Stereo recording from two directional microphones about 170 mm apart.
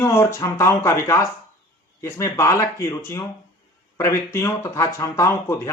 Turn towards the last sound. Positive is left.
turn(degrees=20)  # may be behind; listen again after turning